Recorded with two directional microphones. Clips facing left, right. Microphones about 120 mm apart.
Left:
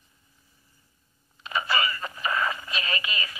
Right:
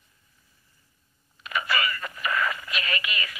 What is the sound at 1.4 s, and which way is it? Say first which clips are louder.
Radio: left 1 dB; 30° left (ahead or behind).